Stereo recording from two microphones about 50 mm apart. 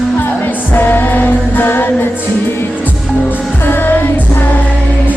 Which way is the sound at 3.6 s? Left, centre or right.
Left.